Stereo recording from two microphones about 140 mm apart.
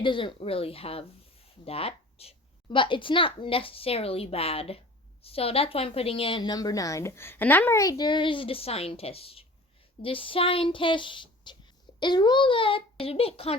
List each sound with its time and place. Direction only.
0.0 s a woman's voice: 35° left (ahead or behind)